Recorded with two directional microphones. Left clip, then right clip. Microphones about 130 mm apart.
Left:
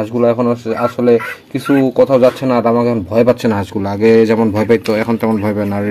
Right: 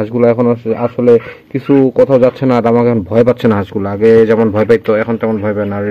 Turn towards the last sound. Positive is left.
turn(degrees=25)  # may be behind; listen again after turning